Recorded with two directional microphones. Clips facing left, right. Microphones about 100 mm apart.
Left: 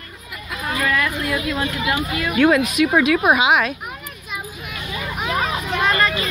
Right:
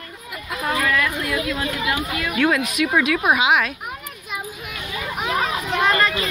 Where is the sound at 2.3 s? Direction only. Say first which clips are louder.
Left 5 dB; 30° left (ahead or behind).